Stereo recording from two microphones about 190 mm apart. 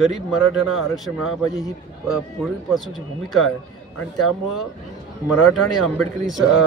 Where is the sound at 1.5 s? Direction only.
20° left (ahead or behind).